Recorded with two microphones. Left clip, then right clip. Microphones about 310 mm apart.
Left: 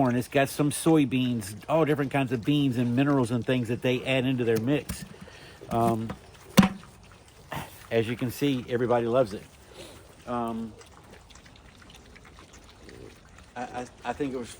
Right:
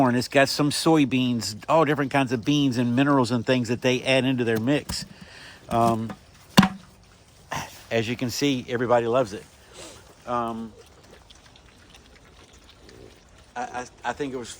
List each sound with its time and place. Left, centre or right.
0.0 s speech: right
7.5 s speech: right
13.5 s speech: right